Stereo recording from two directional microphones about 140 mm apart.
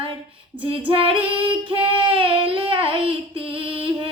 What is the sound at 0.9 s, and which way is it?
Child singing, 40° right (ahead or behind).